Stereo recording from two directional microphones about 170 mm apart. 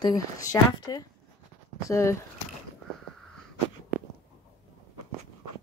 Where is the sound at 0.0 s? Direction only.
20° left (ahead or behind).